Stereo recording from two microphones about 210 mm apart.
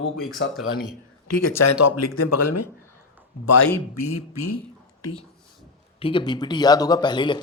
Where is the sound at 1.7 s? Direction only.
90° left.